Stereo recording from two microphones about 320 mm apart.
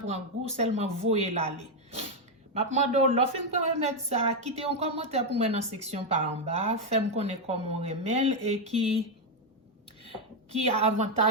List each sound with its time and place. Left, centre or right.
0.1 s speech: centre
10.6 s speech: centre